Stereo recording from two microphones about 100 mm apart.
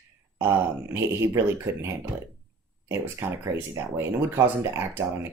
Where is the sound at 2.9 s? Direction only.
25° right (ahead or behind).